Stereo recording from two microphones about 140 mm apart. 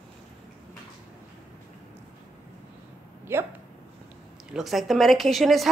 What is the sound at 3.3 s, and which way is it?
Speech, 15° right (ahead or behind).